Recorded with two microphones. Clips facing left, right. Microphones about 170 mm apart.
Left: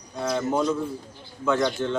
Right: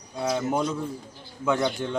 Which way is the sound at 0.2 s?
10° right (ahead or behind).